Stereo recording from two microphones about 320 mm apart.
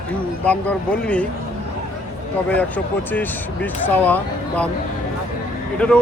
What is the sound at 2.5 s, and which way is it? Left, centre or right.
Speech, centre.